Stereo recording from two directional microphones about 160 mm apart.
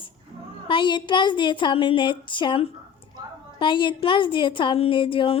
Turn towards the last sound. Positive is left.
turn(degrees=35)  # may be behind; listen again after turning